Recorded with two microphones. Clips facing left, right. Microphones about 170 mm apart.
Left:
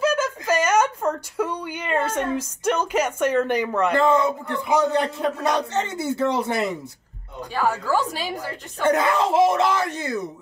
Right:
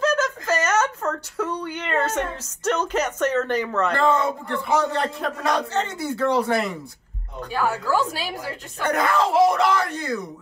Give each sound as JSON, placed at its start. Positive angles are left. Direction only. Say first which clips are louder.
{"t": 0.0, "sound": "a sound", "louder": "even", "side_deg": 10}
{"t": 4.5, "sound": "a man's voice", "louder": "left 2 dB", "side_deg": 20}
{"t": 7.5, "sound": "a woman's voice", "louder": "left 1 dB", "side_deg": -5}
{"t": 8.8, "sound": "a man's voice", "louder": "left 2 dB", "side_deg": 25}